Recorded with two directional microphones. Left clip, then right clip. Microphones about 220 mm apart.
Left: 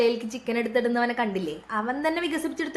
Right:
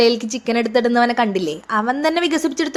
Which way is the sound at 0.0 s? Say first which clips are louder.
Right 8 dB; 40° right (ahead or behind).